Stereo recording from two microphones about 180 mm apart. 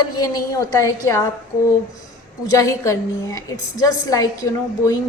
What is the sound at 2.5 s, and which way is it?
A woman's voice, 15° left (ahead or behind).